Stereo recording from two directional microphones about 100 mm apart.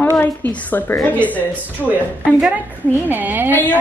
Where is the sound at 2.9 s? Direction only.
20° right (ahead or behind).